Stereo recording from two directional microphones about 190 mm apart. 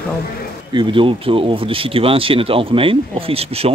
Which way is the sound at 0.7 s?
25° right (ahead or behind).